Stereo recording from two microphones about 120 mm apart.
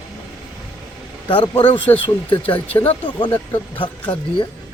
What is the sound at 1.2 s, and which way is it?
Speech, 45° left (ahead or behind).